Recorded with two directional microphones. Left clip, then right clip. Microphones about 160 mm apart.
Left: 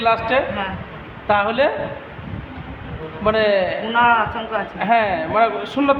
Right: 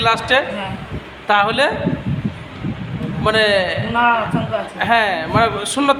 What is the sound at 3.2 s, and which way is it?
A man's voice, 15° right (ahead or behind).